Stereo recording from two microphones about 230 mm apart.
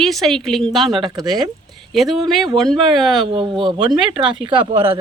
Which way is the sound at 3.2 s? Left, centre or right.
Right.